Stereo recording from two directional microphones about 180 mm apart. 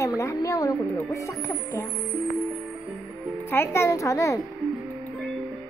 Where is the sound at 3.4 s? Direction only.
15° left (ahead or behind).